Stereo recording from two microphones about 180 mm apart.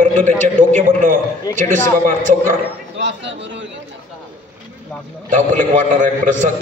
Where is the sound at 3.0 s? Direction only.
85° right.